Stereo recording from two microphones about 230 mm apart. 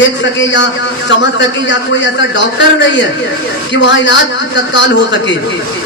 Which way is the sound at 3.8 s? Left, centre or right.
Left.